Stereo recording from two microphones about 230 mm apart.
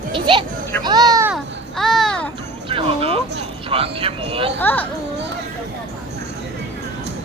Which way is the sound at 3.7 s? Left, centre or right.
Right.